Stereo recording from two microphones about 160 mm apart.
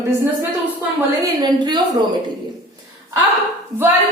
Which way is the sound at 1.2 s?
25° right (ahead or behind).